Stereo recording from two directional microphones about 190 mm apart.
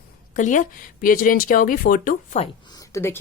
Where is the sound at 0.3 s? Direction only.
40° left (ahead or behind).